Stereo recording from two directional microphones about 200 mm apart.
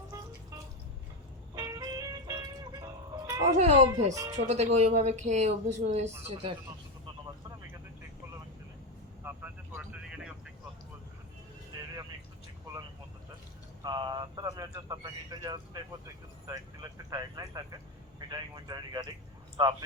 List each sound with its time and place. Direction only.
1.5 s music: 20° right (ahead or behind)
3.5 s speech: 35° right (ahead or behind)
4.1 s speech: 15° right (ahead or behind)
4.4 s speech: 35° right (ahead or behind)
9.2 s vehicle: 5° right (ahead or behind)
13.8 s a sound: 20° right (ahead or behind)
18.2 s vehicle: 20° right (ahead or behind)